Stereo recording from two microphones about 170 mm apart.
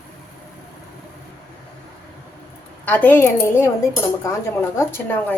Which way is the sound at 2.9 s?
10° left (ahead or behind).